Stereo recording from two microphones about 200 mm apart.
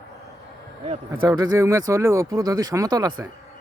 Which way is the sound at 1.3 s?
20° right (ahead or behind).